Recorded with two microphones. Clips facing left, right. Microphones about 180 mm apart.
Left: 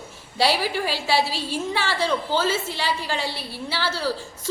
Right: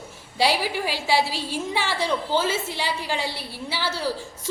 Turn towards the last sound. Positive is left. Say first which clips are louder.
# left 1 dB
turn(degrees=-15)  # may be behind; listen again after turning